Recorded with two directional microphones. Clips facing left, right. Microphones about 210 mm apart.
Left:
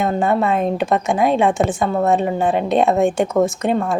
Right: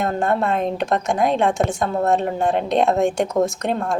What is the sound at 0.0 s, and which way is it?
A woman's voice, centre (ahead or behind).